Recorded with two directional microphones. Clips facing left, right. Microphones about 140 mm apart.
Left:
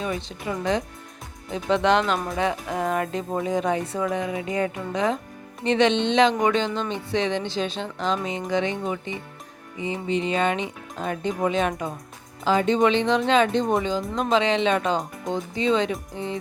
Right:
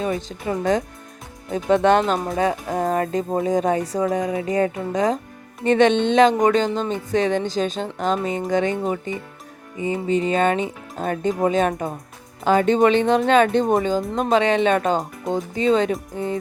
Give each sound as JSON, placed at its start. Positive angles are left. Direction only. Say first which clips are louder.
{"t": 0.0, "sound": "speech", "louder": "right 4 dB", "side_deg": -45}
{"t": 2.1, "sound": "speech", "louder": "right 3 dB", "side_deg": -30}
{"t": 2.4, "sound": "speech", "louder": "right 4 dB", "side_deg": -40}